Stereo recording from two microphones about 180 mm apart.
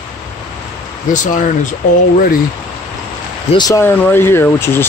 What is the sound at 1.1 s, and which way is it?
Speech, 45° left (ahead or behind).